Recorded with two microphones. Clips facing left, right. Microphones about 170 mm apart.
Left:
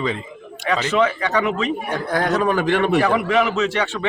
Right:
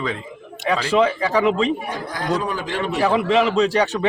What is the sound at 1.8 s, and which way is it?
A man's voice, 60° left (ahead or behind).